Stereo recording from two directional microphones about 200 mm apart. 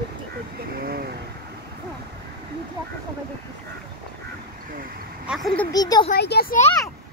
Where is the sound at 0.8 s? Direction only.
50° right (ahead or behind).